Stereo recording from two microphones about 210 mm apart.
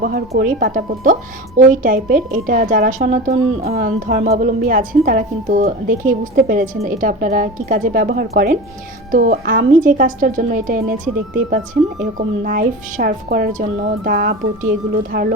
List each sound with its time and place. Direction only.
0.0 s a woman's voice: 40° right (ahead or behind)
12.1 s speech: 40° right (ahead or behind)